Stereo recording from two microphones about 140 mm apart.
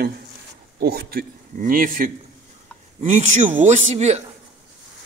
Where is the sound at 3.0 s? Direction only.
55° right (ahead or behind).